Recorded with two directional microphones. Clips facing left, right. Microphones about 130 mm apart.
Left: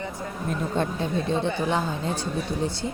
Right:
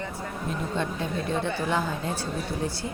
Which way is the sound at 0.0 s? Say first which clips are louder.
Left 1 dB; 15° left (ahead or behind).